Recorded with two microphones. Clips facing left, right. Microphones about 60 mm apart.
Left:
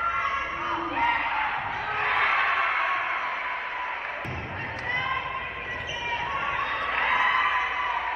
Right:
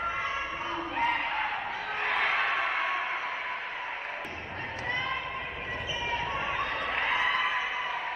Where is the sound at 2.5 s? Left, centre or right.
Left.